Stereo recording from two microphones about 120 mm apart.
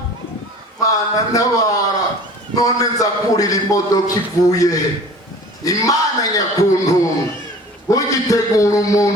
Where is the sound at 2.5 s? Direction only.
30° left (ahead or behind).